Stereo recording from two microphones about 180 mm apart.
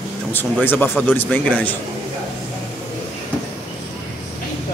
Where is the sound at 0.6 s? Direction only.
10° left (ahead or behind).